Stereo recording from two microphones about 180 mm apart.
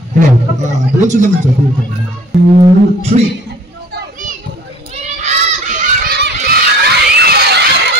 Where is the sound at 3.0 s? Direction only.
35° right (ahead or behind).